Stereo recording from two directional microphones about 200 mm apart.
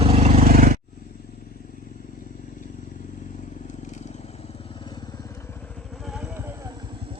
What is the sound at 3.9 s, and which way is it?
Vehicle, 35° left (ahead or behind).